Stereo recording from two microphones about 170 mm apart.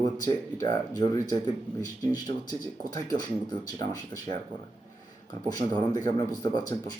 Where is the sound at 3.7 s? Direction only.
20° left (ahead or behind).